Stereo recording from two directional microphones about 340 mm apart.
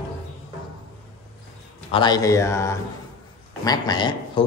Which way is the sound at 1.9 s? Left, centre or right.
Centre.